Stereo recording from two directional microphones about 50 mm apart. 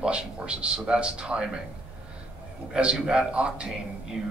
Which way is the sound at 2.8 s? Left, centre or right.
Centre.